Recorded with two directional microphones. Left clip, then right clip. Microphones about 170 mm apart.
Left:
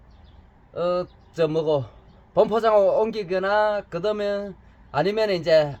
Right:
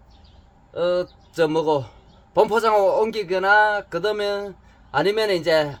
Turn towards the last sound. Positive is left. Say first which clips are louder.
# even
turn(degrees=-15)  # may be behind; listen again after turning